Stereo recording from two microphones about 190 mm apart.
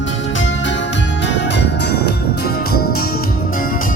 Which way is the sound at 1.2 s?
65° left (ahead or behind).